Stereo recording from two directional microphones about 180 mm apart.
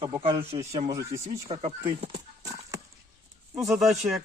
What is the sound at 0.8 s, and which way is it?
Speech, 15° right (ahead or behind).